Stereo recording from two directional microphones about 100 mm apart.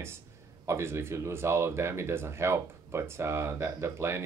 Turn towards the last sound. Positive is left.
turn(degrees=-25)  # may be behind; listen again after turning